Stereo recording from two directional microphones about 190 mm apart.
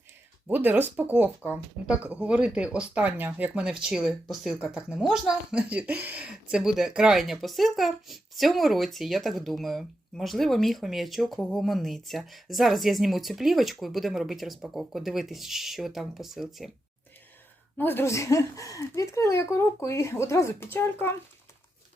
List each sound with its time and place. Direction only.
0.4 s speech: 10° right (ahead or behind)
17.7 s speech: 10° left (ahead or behind)